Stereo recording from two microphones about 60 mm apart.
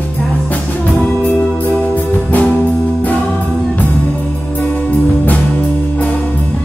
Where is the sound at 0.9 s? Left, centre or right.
Centre.